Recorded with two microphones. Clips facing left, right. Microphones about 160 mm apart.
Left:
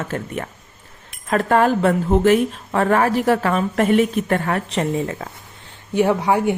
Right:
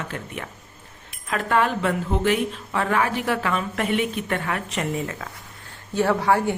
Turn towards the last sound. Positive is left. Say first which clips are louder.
# left 3 dB
turn(degrees=15)  # may be behind; listen again after turning